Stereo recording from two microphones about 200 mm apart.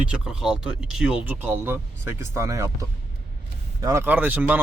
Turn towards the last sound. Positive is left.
turn(degrees=-10)  # may be behind; listen again after turning